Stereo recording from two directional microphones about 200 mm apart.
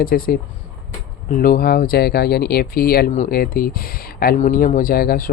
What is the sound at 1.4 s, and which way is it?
Speech, 45° left (ahead or behind).